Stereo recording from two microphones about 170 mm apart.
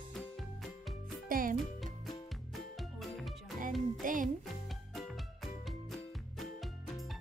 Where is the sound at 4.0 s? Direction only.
50° right (ahead or behind).